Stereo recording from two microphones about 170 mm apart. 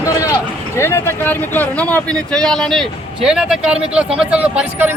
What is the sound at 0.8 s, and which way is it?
Speech, 15° left (ahead or behind).